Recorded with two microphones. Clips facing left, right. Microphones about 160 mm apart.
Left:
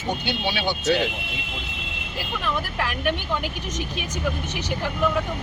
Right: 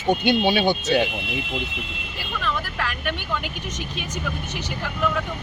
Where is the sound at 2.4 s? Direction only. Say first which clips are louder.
Even; 15° left (ahead or behind).